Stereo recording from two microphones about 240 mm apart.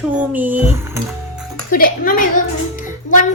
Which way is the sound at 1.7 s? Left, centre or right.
Left.